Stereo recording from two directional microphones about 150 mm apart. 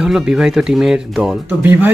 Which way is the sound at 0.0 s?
5° right (ahead or behind).